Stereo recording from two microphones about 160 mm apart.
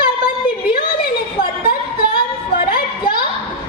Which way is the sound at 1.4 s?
65° left (ahead or behind).